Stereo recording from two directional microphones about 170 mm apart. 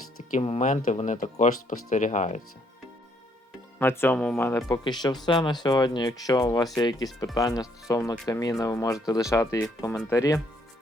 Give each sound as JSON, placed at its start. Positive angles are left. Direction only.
{"t": 0.3, "sound": "speech", "side_deg": 40}
{"t": 3.8, "sound": "speech", "side_deg": 15}
{"t": 4.8, "sound": "speech", "side_deg": 25}